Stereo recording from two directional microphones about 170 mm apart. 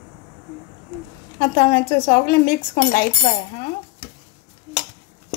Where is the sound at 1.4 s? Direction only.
65° left (ahead or behind).